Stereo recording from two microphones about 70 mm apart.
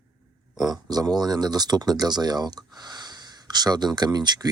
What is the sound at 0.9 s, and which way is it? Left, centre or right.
Speech, right.